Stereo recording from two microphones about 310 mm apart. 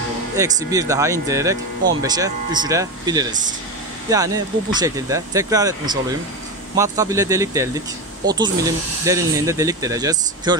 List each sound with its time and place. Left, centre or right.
0.4 s speech: centre